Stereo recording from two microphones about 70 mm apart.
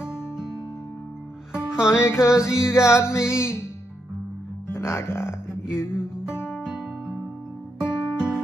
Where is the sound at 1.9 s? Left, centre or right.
Left.